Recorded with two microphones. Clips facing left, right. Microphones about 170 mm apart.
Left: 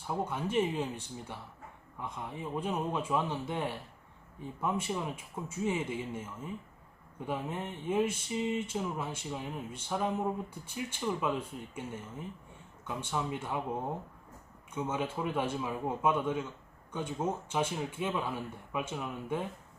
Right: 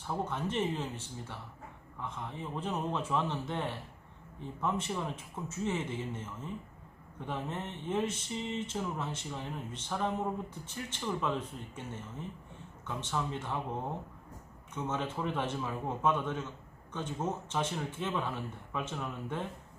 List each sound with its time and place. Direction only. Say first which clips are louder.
0.1 s speech: left 2 dB; 10° left (ahead or behind)
14.8 s speech: left 1 dB; 10° left (ahead or behind)